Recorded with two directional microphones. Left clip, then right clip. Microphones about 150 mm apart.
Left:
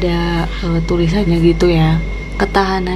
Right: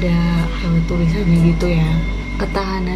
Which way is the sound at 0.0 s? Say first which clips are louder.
Left 4 dB; 90° left.